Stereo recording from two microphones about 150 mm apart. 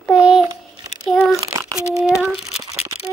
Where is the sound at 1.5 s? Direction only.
20° right (ahead or behind).